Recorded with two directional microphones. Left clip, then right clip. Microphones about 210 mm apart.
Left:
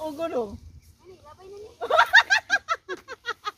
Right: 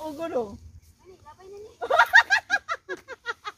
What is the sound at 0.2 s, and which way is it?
Speech, 40° left (ahead or behind).